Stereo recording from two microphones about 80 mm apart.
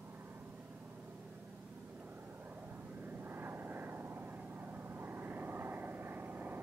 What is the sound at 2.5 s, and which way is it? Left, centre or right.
Vehicle, right.